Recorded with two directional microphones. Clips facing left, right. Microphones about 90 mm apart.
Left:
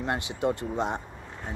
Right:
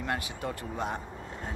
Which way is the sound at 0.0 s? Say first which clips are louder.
Left 5 dB; 25° left (ahead or behind).